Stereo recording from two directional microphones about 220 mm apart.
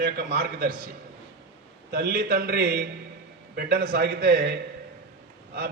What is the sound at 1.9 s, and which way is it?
A man's voice, 45° right (ahead or behind).